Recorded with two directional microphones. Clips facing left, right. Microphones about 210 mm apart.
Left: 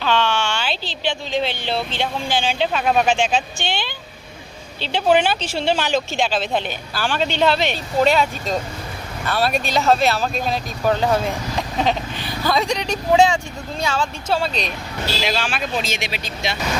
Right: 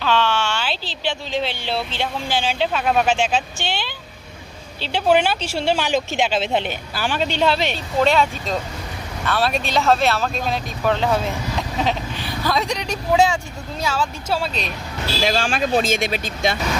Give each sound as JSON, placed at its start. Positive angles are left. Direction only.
{"t": 0.0, "sound": "speech", "side_deg": -5}
{"t": 7.3, "sound": "speech", "side_deg": -5}
{"t": 15.3, "sound": "speech", "side_deg": -45}